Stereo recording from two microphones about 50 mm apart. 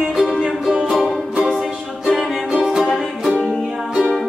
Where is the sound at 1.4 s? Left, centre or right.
Centre.